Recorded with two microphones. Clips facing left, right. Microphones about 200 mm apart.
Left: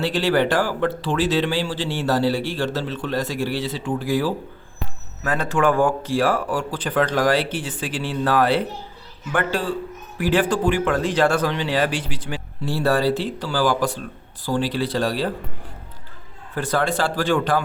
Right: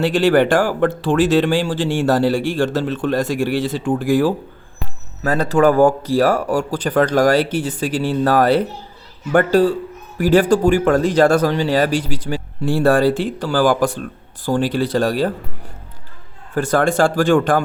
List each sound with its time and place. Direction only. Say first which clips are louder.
0.0 s speech: right 6 dB; 50° right (ahead or behind)
5.2 s speech: right 6 dB; 35° right (ahead or behind)
16.6 s speech: right 6 dB; 50° right (ahead or behind)